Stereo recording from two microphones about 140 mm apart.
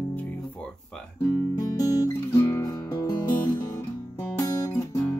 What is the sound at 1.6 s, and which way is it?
Guitar, 25° left (ahead or behind).